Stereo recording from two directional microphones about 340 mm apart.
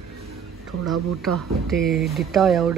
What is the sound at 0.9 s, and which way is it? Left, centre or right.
Speech, centre.